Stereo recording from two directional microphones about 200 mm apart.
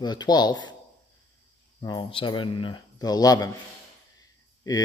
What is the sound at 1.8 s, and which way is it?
Speech, 20° left (ahead or behind).